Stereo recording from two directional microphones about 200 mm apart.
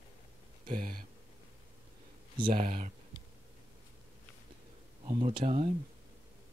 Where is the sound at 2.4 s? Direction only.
45° right (ahead or behind).